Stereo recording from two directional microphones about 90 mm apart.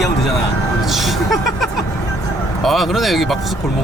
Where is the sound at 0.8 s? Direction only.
Centre (ahead or behind).